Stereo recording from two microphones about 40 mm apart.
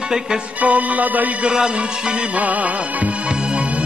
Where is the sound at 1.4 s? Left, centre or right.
Centre.